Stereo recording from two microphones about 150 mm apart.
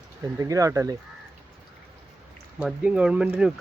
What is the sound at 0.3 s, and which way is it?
Speech, 20° right (ahead or behind).